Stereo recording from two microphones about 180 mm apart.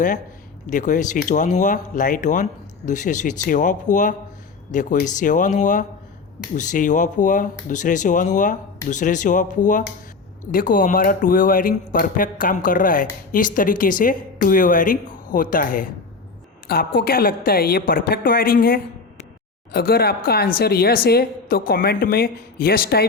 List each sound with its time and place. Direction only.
0.7 s speech: 45° left (ahead or behind)